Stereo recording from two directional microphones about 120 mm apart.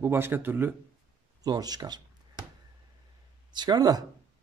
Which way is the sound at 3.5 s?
35° right (ahead or behind).